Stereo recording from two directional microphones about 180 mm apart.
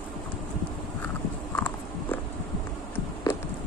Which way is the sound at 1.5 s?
10° left (ahead or behind).